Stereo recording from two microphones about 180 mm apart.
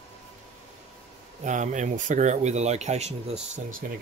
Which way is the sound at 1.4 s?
45° right (ahead or behind).